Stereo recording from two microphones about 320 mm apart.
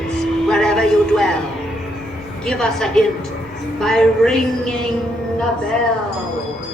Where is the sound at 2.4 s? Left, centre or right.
Centre.